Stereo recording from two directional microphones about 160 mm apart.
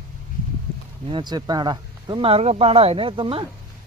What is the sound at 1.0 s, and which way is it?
Speech, 30° right (ahead or behind).